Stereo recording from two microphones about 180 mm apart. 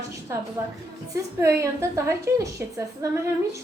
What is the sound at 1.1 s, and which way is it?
A woman's voice, 15° right (ahead or behind).